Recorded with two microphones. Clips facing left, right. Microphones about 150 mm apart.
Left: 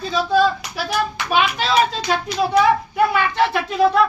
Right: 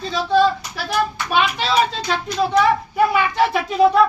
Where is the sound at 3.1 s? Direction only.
5° right (ahead or behind).